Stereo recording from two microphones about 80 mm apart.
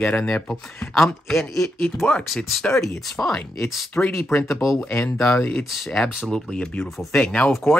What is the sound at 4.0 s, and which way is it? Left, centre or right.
Speech, left.